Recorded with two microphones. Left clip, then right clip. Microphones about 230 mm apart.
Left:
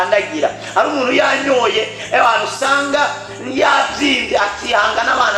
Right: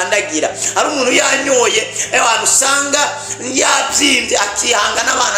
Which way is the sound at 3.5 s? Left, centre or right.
Right.